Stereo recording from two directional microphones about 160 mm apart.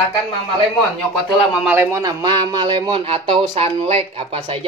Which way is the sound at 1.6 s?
15° right (ahead or behind).